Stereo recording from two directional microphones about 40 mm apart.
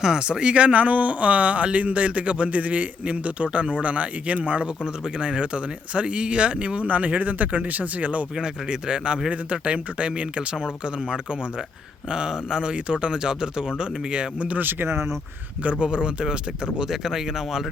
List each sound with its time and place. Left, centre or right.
0.0 s speech: centre
4.8 s speech: centre; by 8.3 s right
8.4 s speech: right
14.6 s speech: right
15.8 s speech: right
16.7 s speech: centre